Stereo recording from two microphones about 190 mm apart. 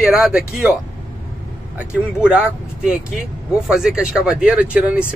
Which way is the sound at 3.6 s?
5° right (ahead or behind).